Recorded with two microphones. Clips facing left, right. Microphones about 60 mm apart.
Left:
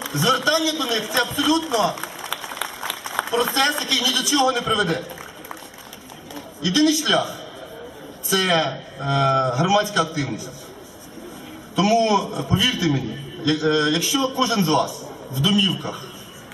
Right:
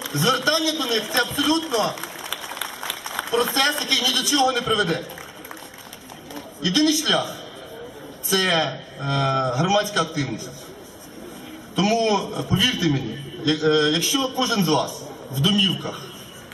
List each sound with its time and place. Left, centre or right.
0.0 s a man's voice: centre
2.2 s run: centre
3.5 s a man's voice: centre
6.7 s a man's voice: centre
11.8 s a man's voice: centre